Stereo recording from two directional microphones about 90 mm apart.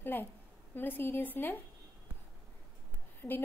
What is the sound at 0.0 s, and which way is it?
A woman's voice, 25° left (ahead or behind).